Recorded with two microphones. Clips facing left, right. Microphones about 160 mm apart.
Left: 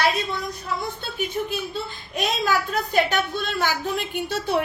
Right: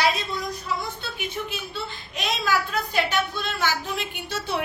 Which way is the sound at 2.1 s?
45° left (ahead or behind).